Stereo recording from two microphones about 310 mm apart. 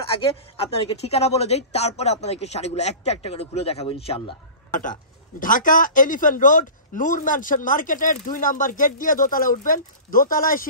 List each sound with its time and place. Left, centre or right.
0.6 s speech: centre